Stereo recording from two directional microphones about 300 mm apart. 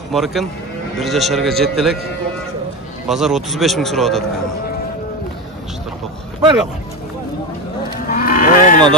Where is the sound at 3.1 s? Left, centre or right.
Centre.